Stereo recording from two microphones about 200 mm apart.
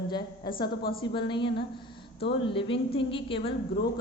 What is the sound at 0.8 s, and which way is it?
Speech, 50° left (ahead or behind).